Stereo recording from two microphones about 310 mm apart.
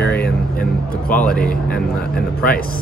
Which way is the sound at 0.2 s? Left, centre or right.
Left.